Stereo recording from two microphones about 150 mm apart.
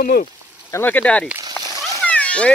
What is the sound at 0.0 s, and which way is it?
Speech, 65° left (ahead or behind).